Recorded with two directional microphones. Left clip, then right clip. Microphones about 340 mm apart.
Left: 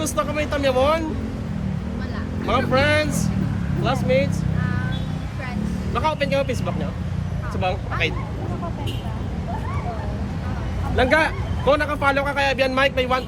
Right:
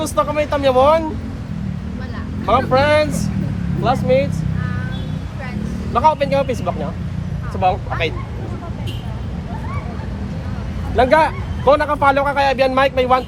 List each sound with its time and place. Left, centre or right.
0.0 s a man's voice: centre
2.5 s a man's voice: centre
5.9 s a man's voice: centre
10.9 s a man's voice: centre